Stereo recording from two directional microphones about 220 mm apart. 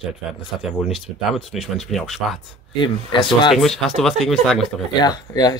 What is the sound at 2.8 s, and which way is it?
Speech, 20° left (ahead or behind).